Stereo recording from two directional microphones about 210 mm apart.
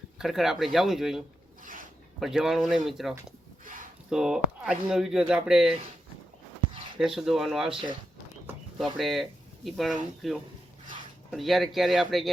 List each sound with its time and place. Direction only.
0.2 s speech: centre (ahead or behind)
1.6 s zipper: 40° right (ahead or behind)
2.2 s speech: centre (ahead or behind)
7.0 s speech: centre (ahead or behind)
8.8 s speech: centre (ahead or behind)